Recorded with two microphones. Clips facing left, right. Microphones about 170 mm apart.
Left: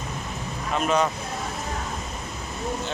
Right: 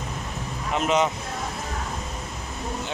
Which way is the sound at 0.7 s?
20° right (ahead or behind).